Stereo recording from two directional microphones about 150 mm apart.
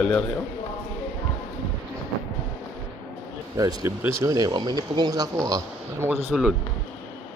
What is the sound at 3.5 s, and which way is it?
Speech, 25° right (ahead or behind).